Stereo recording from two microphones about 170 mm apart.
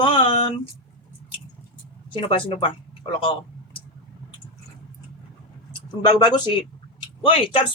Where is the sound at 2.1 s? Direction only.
30° left (ahead or behind).